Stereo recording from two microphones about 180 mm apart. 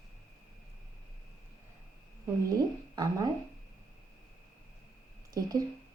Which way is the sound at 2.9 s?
20° right (ahead or behind).